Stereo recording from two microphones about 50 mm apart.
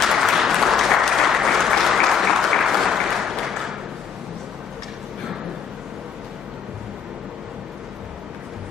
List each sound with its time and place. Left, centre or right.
0.1 s applause: centre